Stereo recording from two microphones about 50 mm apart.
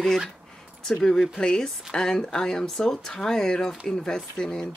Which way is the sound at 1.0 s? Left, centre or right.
Centre.